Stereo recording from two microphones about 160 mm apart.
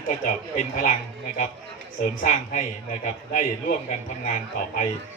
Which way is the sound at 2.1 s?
55° left (ahead or behind).